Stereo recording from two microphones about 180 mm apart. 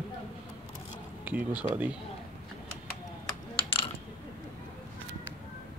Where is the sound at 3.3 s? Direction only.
30° left (ahead or behind).